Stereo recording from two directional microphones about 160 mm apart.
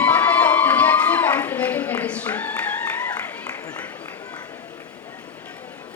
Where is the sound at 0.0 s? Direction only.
10° left (ahead or behind).